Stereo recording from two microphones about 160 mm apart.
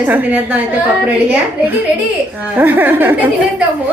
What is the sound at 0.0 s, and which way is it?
Speech, 10° right (ahead or behind).